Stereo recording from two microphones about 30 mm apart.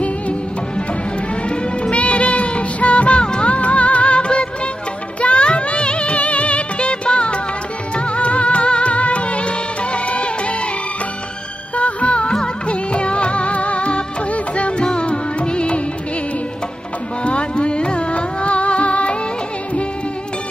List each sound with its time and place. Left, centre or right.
1.5 s music: left
11.7 s music: left
17.2 s music: left